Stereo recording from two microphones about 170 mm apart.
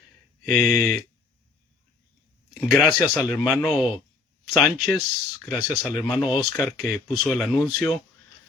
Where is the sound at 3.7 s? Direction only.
5° right (ahead or behind).